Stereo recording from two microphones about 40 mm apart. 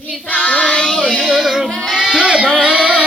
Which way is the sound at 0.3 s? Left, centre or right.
Left.